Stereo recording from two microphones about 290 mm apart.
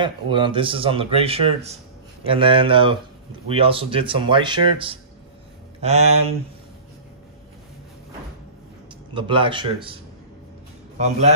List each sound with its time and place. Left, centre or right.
0.0 s a man's voice: centre
9.1 s speech: centre
11.0 s a man's voice: right